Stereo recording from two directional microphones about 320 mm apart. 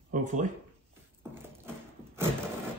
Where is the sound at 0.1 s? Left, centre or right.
Right.